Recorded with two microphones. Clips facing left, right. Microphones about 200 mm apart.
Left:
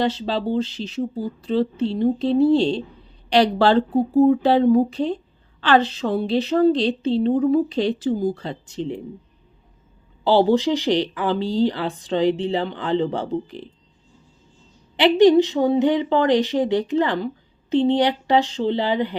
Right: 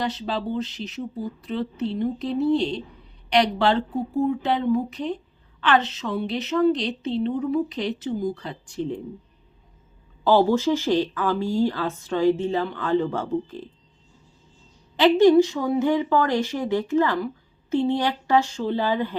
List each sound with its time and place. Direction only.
0.0 s a woman's voice: 30° left (ahead or behind)
10.3 s speech: 15° left (ahead or behind)
14.9 s speech: 15° left (ahead or behind)